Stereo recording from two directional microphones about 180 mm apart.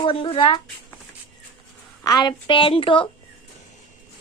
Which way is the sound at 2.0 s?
20° left (ahead or behind).